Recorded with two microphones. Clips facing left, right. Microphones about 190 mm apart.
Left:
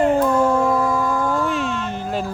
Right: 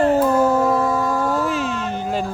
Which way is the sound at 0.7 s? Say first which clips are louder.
Even; 25° right (ahead or behind).